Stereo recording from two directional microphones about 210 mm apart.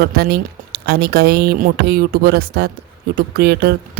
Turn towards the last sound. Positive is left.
turn(degrees=-50)  # may be behind; listen again after turning